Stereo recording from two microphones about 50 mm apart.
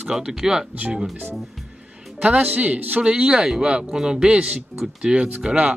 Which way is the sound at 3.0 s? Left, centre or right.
Centre.